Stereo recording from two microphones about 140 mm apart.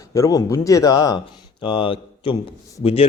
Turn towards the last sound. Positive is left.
turn(degrees=45)  # may be behind; listen again after turning